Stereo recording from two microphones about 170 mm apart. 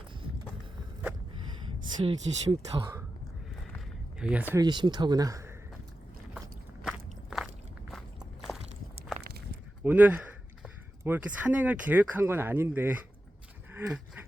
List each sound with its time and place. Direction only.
2.0 s speech: 30° right (ahead or behind)
4.2 s speech: 5° right (ahead or behind)
4.5 s speech: 25° right (ahead or behind)
6.8 s biting: centre (ahead or behind)
9.8 s speech: 10° right (ahead or behind)
13.7 s a sound: 10° right (ahead or behind)